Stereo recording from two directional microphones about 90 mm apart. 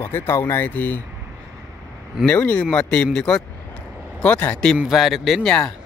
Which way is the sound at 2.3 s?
15° left (ahead or behind).